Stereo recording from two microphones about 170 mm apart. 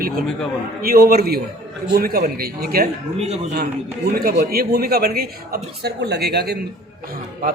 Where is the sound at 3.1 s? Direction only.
40° right (ahead or behind).